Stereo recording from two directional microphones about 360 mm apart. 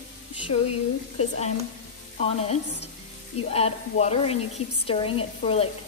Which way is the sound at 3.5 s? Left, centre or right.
Centre.